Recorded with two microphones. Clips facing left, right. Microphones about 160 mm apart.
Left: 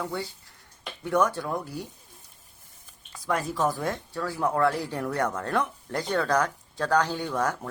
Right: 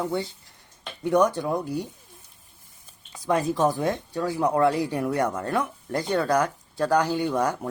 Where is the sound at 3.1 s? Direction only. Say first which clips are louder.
Right 5 dB; 20° right (ahead or behind).